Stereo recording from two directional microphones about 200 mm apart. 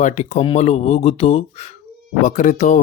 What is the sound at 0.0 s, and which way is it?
Speech, 35° left (ahead or behind).